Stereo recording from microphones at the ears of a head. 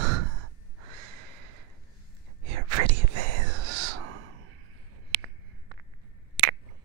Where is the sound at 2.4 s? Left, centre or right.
Right.